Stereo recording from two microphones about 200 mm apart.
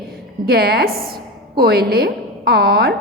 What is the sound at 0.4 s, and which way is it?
A woman's voice, 50° right (ahead or behind).